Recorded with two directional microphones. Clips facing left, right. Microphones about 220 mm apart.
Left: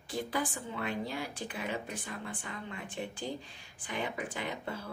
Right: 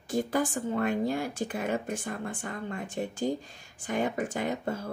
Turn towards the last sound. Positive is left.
turn(degrees=-45)  # may be behind; listen again after turning